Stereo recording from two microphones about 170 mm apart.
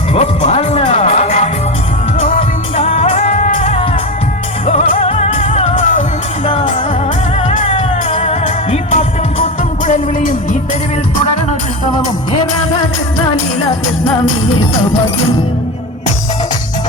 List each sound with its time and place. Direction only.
0.1 s music: 40° left (ahead or behind)
7.7 s music: 35° left (ahead or behind); by 10.6 s 50° left (ahead or behind)